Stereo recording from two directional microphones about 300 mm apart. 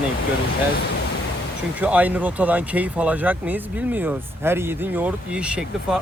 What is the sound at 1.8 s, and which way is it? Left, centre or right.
Speech, centre.